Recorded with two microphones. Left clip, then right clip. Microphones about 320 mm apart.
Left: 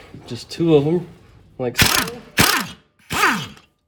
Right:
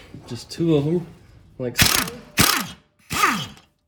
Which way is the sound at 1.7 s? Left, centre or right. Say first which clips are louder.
Left 2 dB; centre.